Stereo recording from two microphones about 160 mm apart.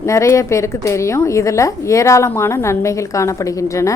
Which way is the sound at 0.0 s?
20° left (ahead or behind).